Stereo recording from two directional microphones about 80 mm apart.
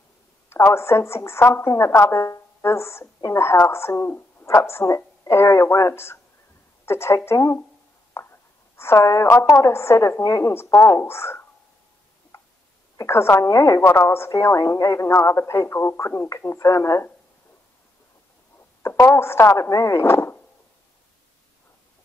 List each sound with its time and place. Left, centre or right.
0.5 s a woman's voice: left
10.5 s a woman's voice: left
12.3 s a sound: left
12.9 s a woman's voice: left
13.5 s a woman's voice: left
13.7 s a woman's voice: left
16.2 s a woman's voice: left
18.8 s a woman's voice: left
20.1 s a sound: left